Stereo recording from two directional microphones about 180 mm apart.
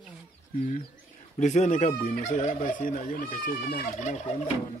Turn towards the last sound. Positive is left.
turn(degrees=40)  # may be behind; listen again after turning